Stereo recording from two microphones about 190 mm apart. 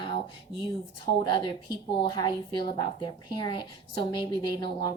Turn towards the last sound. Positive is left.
turn(degrees=25)  # may be behind; listen again after turning